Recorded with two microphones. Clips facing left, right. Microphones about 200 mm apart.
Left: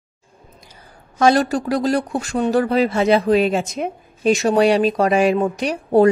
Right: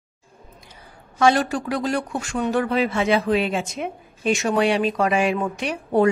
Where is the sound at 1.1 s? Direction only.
40° left (ahead or behind).